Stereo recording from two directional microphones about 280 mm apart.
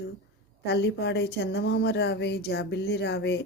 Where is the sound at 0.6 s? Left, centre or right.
Left.